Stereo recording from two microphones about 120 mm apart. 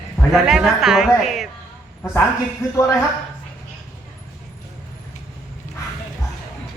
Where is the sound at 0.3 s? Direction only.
5° right (ahead or behind).